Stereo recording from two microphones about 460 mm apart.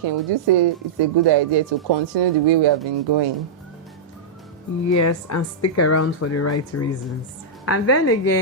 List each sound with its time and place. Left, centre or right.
0.0 s speech: right
4.9 s speech: left